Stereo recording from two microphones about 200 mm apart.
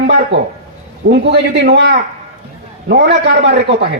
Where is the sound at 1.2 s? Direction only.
60° right (ahead or behind).